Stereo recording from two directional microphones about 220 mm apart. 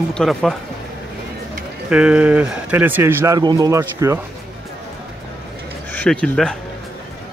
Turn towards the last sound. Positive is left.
turn(degrees=5)  # may be behind; listen again after turning